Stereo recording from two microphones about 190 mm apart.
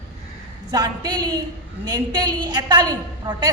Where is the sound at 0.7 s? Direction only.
20° right (ahead or behind).